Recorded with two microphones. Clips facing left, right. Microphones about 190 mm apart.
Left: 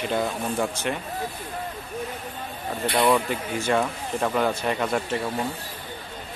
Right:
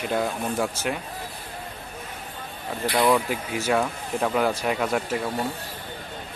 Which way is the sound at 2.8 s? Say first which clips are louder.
Even; 25° left (ahead or behind).